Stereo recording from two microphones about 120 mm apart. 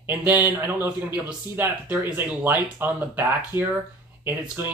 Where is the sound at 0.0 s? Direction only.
15° right (ahead or behind).